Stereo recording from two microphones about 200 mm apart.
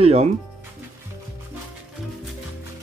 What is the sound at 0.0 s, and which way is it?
Speech, 30° right (ahead or behind).